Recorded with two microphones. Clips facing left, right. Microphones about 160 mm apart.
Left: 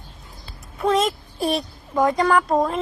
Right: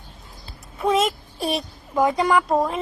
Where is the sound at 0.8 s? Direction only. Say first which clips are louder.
Even; 5° right (ahead or behind).